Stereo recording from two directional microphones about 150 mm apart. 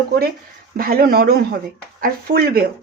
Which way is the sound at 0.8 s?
75° right (ahead or behind).